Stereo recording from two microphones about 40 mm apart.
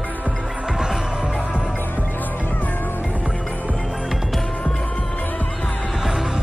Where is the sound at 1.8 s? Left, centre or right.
Left.